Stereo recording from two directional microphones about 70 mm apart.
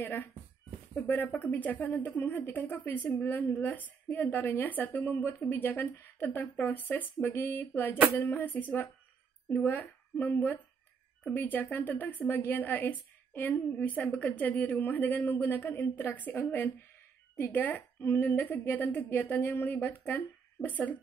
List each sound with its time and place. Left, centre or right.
0.0 s a woman's voice: left